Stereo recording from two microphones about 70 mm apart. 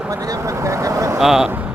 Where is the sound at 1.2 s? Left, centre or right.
Centre.